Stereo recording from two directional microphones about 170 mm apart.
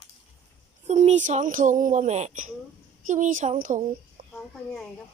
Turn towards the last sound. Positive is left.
turn(degrees=5)  # may be behind; listen again after turning